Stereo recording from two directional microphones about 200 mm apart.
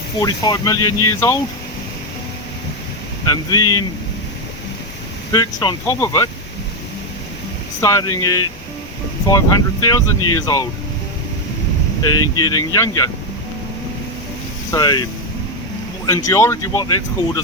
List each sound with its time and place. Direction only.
0.2 s speech: 20° left (ahead or behind)
3.2 s speech: 20° left (ahead or behind)
5.3 s speech: 20° left (ahead or behind)
7.8 s speech: 15° left (ahead or behind)
12.0 s speech: 20° left (ahead or behind)
14.7 s speech: 20° left (ahead or behind)
16.0 s speech: 15° left (ahead or behind)